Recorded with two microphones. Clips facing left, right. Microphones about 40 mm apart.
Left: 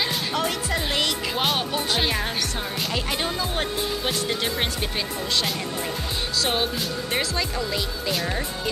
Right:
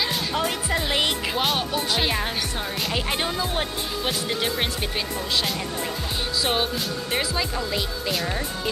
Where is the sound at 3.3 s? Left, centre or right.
Centre.